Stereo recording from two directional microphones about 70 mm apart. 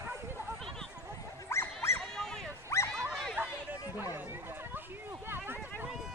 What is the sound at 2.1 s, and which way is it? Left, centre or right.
Dog, centre.